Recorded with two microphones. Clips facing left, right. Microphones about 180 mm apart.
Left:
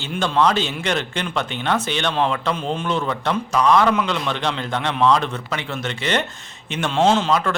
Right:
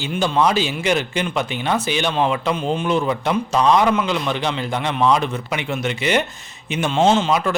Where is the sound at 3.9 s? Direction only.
5° right (ahead or behind).